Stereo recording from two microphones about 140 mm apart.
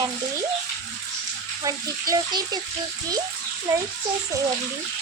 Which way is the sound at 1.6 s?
25° right (ahead or behind).